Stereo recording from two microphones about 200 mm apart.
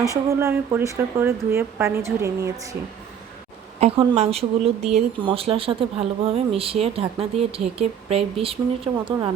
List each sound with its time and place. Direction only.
0.3 s a woman's voice: 10° right (ahead or behind)
3.8 s a woman's voice: 30° right (ahead or behind)